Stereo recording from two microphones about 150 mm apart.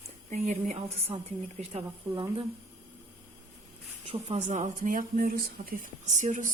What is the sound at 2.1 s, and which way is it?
Speech, 30° right (ahead or behind).